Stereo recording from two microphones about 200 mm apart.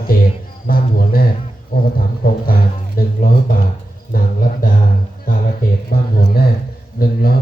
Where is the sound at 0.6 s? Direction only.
45° left (ahead or behind).